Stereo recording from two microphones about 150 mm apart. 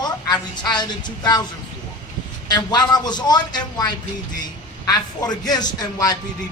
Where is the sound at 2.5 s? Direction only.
25° left (ahead or behind).